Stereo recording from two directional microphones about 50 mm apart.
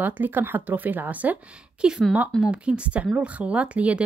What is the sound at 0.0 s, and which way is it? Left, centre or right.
Speech, right.